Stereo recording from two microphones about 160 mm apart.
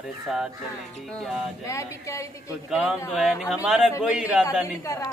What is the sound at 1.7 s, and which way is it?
Speech, 20° left (ahead or behind).